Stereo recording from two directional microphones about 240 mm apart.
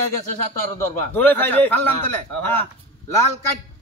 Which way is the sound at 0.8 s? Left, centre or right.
Centre.